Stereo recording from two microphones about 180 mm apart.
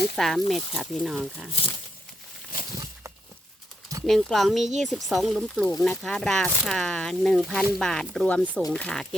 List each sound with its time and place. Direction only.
0.2 s speech: centre (ahead or behind)
2.5 s a sound: 50° left (ahead or behind)
4.0 s speech: centre (ahead or behind)